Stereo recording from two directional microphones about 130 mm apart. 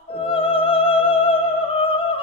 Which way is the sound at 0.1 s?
45° left (ahead or behind).